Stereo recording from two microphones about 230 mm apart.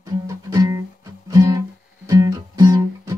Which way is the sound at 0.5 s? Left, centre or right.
Centre.